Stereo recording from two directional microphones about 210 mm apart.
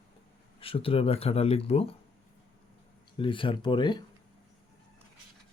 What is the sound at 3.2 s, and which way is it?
Speech, 25° left (ahead or behind).